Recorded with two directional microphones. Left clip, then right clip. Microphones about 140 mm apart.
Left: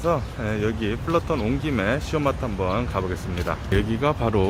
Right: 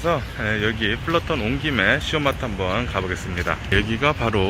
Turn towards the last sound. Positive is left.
turn(degrees=15)  # may be behind; listen again after turning